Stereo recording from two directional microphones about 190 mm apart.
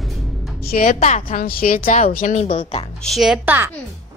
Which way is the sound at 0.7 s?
45° left (ahead or behind).